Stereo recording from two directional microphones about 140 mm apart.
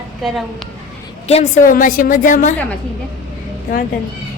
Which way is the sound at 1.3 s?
50° left (ahead or behind).